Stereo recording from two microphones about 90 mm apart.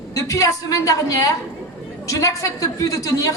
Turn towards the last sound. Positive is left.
turn(degrees=40)  # may be behind; listen again after turning